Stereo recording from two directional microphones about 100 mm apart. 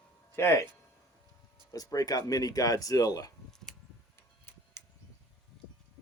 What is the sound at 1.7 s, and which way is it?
Speech, 40° left (ahead or behind).